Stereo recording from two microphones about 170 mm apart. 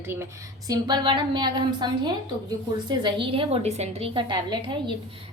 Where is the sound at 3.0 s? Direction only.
30° right (ahead or behind).